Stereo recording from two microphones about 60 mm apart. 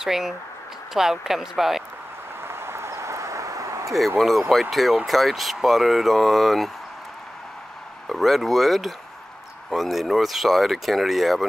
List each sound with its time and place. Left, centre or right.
0.0 s speech: centre
2.4 s a sound: right
4.2 s speech: centre
8.1 s speech: centre